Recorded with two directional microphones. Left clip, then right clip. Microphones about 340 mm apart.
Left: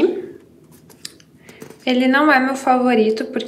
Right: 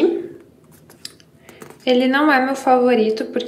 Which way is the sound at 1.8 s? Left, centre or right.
Centre.